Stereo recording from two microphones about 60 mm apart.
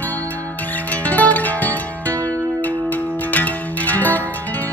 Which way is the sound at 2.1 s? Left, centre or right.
Right.